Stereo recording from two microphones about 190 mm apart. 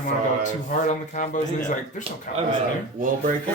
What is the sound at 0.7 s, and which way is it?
Speech, 45° left (ahead or behind).